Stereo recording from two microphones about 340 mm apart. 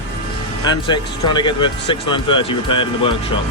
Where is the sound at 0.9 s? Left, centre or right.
Centre.